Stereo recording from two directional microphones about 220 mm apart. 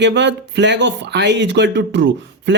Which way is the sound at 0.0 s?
55° right (ahead or behind).